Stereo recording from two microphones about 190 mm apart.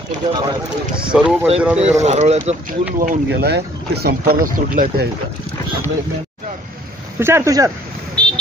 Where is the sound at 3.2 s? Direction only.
60° right (ahead or behind).